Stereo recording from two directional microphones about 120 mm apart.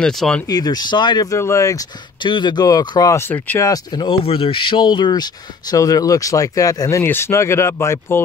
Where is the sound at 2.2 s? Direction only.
40° left (ahead or behind); by 3.6 s 15° left (ahead or behind).